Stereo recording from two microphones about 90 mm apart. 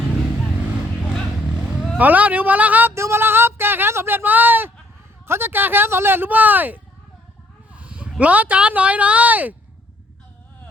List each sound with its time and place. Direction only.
2.0 s speech: 15° right (ahead or behind)
2.9 s speech: 30° right (ahead or behind)
7.7 s a sound: 15° right (ahead or behind)
8.2 s speech: 15° right (ahead or behind)